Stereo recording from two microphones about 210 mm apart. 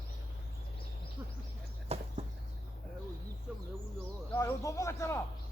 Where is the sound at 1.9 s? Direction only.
30° right (ahead or behind).